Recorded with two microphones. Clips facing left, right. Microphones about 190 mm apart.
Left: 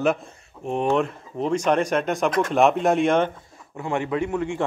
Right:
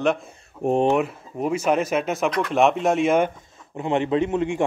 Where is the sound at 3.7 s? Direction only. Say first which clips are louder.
Right 4 dB; 20° right (ahead or behind).